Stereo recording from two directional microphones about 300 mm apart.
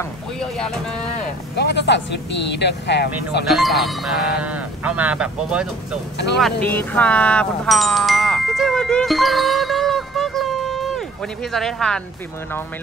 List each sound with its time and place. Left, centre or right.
0.4 s vehicle: centre
1.6 s speech: left
3.4 s speech: centre